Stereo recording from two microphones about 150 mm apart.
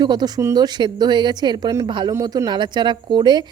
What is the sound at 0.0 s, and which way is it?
Speech, 30° right (ahead or behind).